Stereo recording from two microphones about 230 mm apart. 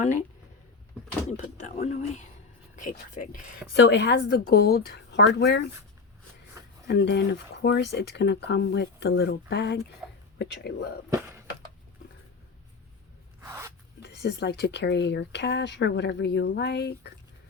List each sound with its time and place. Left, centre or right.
1.4 s speech: left
3.8 s speech: left
6.8 s speech: left
10.0 s a sound: centre
10.3 s speech: left
13.4 s a sound: centre
14.0 s speech: left